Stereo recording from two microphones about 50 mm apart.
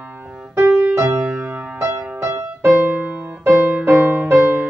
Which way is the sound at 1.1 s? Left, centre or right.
Right.